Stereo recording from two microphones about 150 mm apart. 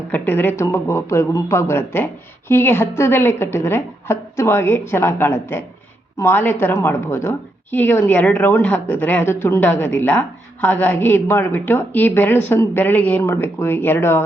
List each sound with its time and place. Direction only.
0.1 s a woman's voice: 15° left (ahead or behind)